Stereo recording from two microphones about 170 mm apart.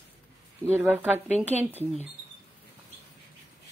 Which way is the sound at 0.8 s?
10° right (ahead or behind).